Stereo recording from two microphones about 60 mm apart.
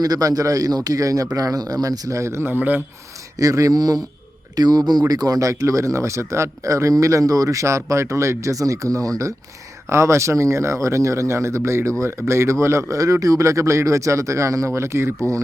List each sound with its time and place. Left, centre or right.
0.0 s a man's voice: right
2.5 s speech: right
3.3 s speech: right
9.9 s speech: right